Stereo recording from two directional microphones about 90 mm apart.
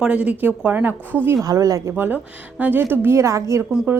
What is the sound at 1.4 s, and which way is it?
Speech, 40° right (ahead or behind).